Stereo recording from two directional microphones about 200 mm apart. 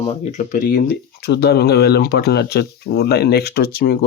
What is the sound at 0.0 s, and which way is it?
Speech, 30° left (ahead or behind).